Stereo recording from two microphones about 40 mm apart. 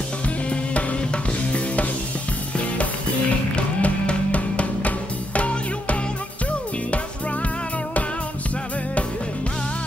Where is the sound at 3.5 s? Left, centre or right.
Left.